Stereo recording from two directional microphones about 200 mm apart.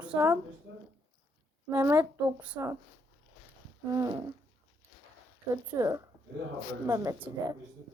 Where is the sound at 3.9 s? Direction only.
15° right (ahead or behind).